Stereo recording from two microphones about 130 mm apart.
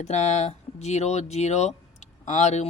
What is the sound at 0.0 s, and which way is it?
Speech, 60° left (ahead or behind).